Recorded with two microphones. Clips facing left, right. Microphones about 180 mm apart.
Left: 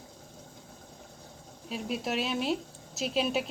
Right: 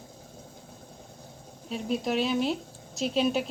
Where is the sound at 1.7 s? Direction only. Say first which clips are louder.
Right 4 dB; centre (ahead or behind).